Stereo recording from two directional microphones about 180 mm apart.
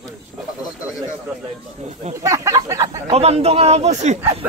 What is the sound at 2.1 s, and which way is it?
Speech, 15° right (ahead or behind).